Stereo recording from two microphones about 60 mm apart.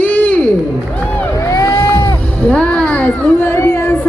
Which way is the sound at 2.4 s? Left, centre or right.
Left.